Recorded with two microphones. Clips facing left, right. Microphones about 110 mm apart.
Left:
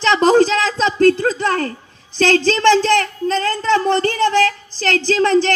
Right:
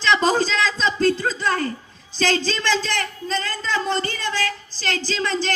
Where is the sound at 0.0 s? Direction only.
55° left (ahead or behind).